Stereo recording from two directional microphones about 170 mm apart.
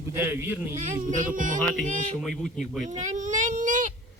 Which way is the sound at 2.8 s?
45° right (ahead or behind).